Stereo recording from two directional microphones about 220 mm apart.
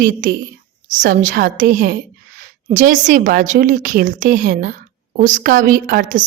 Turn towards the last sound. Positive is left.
turn(degrees=-35)  # may be behind; listen again after turning